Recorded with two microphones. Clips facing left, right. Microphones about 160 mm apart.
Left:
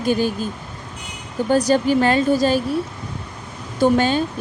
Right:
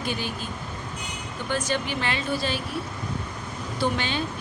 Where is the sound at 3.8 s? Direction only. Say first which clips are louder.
Left 11 dB; 45° left (ahead or behind).